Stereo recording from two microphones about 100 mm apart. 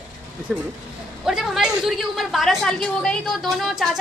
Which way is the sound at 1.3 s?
5° right (ahead or behind).